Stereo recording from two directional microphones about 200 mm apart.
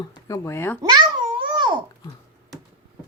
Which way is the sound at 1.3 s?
25° right (ahead or behind).